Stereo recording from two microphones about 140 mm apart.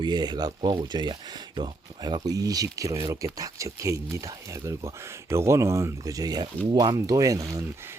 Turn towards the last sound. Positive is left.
turn(degrees=-25)  # may be behind; listen again after turning